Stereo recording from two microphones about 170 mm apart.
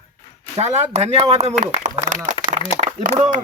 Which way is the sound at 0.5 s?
40° right (ahead or behind).